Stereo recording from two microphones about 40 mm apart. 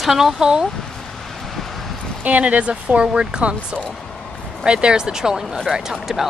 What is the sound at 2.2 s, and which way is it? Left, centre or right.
Speech, right.